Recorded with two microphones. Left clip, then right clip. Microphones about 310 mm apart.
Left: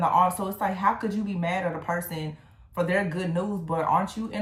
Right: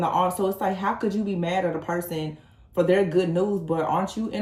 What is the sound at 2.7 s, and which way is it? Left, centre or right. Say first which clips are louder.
Speech: right 6 dB; centre.